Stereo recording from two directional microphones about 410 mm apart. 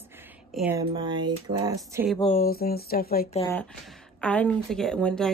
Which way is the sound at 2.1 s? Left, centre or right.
Centre.